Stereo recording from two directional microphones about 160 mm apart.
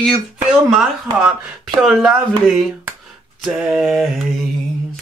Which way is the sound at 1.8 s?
Centre (ahead or behind).